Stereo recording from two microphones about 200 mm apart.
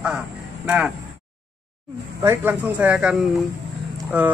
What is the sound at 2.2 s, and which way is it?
Speech, 10° right (ahead or behind).